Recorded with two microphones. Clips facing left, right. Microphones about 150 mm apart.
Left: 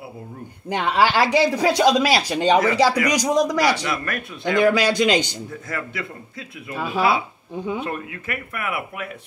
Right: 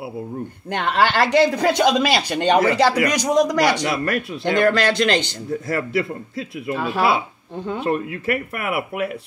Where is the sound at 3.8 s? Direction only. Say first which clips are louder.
Right 5 dB; 35° right (ahead or behind).